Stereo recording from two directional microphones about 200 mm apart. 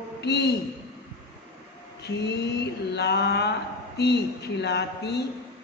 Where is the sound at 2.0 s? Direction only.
55° left (ahead or behind).